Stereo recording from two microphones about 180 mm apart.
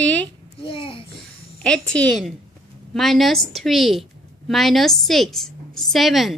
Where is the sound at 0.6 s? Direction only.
30° left (ahead or behind).